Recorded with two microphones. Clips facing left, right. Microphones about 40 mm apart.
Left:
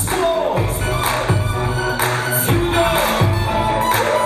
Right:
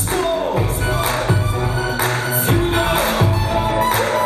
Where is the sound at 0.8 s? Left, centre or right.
Left.